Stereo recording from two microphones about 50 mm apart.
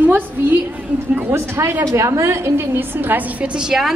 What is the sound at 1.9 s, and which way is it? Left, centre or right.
A woman's voice, right.